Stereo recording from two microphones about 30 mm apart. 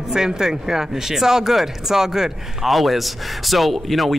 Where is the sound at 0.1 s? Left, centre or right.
Centre.